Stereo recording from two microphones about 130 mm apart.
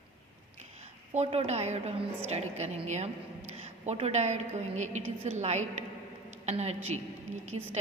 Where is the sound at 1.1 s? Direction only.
55° right (ahead or behind).